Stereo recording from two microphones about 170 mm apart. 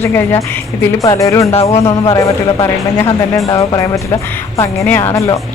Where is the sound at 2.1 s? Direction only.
20° left (ahead or behind).